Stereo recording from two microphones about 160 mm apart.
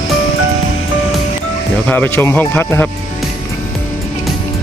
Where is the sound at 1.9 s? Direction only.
10° left (ahead or behind).